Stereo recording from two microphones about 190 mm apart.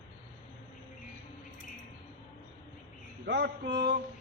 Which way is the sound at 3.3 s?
65° right (ahead or behind).